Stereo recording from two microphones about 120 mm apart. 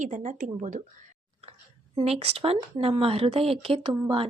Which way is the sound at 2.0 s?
55° right (ahead or behind).